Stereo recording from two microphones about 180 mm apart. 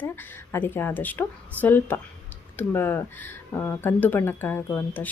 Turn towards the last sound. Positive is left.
turn(degrees=10)  # may be behind; listen again after turning